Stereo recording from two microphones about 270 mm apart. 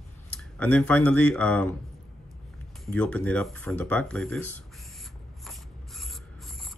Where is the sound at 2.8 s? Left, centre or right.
Centre.